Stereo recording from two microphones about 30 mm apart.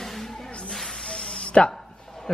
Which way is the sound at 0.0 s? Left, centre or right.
Centre.